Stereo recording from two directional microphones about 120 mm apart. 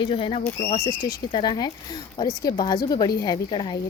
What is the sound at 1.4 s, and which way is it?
Speech, 35° left (ahead or behind).